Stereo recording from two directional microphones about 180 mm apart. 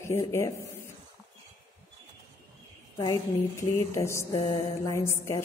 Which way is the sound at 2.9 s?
20° left (ahead or behind).